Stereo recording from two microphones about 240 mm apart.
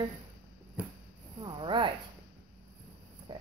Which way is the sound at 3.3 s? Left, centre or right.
Centre.